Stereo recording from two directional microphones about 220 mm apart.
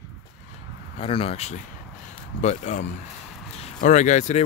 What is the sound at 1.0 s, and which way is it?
Speech, 25° left (ahead or behind).